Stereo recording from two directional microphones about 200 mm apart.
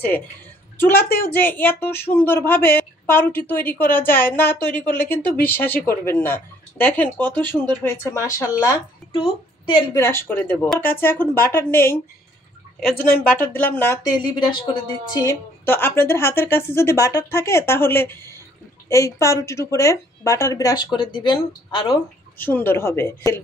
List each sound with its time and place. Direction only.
0.7 s a child's voice: 10° left (ahead or behind)
9.9 s speech: 10° left (ahead or behind)
12.9 s speech: 45° left (ahead or behind)
13.3 s speech: 10° left (ahead or behind)
14.1 s speech: 20° left (ahead or behind)
15.2 s speech: 10° left (ahead or behind)
22.4 s speech: 10° left (ahead or behind)